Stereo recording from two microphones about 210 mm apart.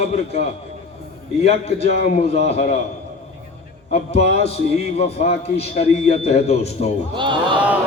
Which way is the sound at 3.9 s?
30° left (ahead or behind).